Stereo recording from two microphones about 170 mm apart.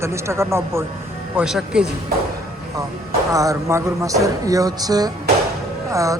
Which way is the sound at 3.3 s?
20° right (ahead or behind).